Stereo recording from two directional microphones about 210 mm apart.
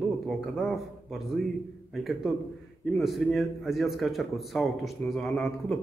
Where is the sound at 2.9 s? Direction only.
Centre (ahead or behind).